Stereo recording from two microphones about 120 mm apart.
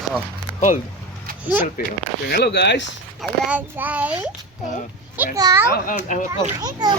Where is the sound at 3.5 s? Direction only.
15° right (ahead or behind).